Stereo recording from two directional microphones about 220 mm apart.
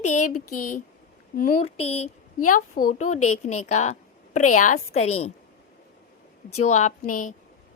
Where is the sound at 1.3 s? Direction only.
40° left (ahead or behind).